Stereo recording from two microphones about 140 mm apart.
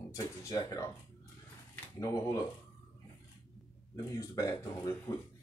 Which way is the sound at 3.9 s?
25° left (ahead or behind).